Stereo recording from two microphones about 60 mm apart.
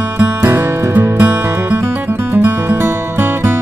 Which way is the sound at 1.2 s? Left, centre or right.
Right.